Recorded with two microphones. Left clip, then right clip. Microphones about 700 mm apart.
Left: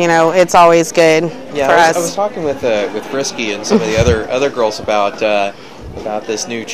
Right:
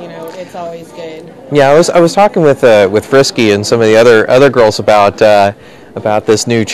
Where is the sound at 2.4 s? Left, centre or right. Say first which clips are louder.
Right 10 dB; right.